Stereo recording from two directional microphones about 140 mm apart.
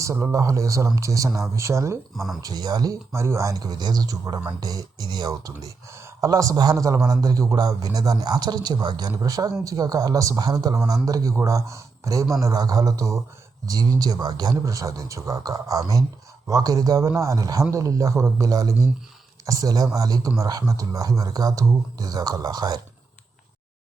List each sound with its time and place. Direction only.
0.0 s speech: 20° right (ahead or behind)
2.1 s speech: centre (ahead or behind)
2.4 s speech: 30° right (ahead or behind)